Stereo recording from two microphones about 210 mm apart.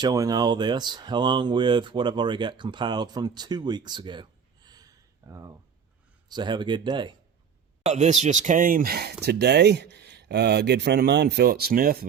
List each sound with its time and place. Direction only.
0.0 s speech: 15° right (ahead or behind)
7.9 s speech: 35° right (ahead or behind)